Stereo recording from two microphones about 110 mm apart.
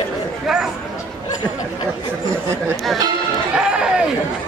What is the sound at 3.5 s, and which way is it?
Run, 10° right (ahead or behind).